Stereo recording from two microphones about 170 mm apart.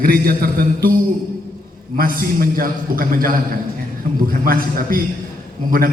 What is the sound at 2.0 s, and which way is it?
A man's voice, 60° right (ahead or behind).